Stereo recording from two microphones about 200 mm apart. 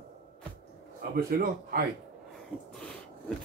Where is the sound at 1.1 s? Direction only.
45° right (ahead or behind).